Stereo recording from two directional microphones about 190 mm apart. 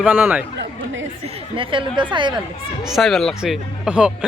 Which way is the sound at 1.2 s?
25° right (ahead or behind).